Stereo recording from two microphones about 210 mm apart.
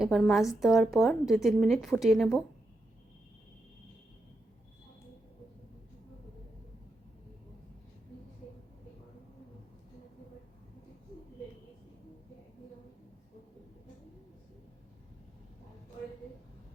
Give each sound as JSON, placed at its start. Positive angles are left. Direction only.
{"t": 0.0, "sound": "a woman's voice", "side_deg": 0}